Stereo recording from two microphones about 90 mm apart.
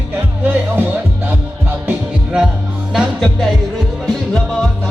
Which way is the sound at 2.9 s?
Centre (ahead or behind).